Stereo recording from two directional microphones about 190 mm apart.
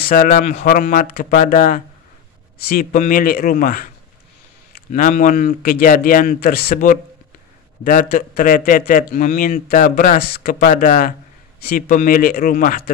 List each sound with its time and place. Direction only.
0.0 s a man's voice: 45° left (ahead or behind)